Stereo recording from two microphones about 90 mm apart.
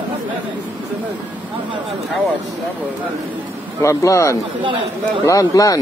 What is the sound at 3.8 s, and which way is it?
Speech, 35° left (ahead or behind).